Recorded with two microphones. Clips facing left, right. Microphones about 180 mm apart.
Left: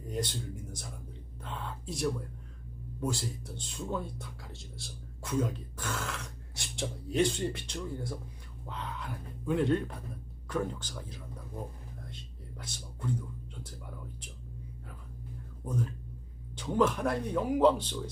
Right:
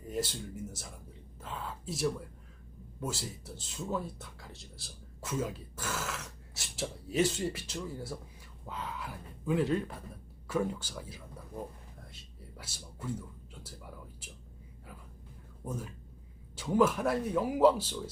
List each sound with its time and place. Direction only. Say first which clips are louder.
0.1 s speech: even; 5° right (ahead or behind)
1.4 s a sound: even; 5° right (ahead or behind)
3.0 s speech: left 4 dB; 5° right (ahead or behind)
15.6 s speech: left 5 dB; 5° right (ahead or behind)